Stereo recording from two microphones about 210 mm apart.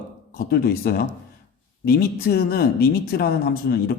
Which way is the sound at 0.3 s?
45° left (ahead or behind).